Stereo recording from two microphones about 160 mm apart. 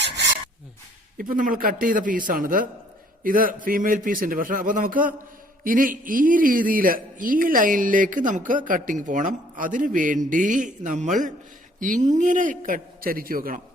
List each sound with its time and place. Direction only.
1.2 s speech: 60° right (ahead or behind)